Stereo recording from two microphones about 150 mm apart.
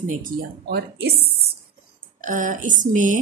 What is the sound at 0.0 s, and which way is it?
Speech, 55° right (ahead or behind).